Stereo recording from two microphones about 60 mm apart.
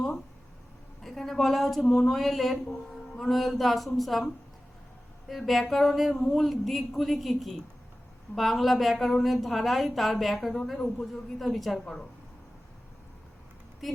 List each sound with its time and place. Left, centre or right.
1.0 s a woman's voice: centre
1.8 s a sound: centre
2.0 s a woman's voice: centre
5.3 s a woman's voice: centre
13.8 s a woman's voice: centre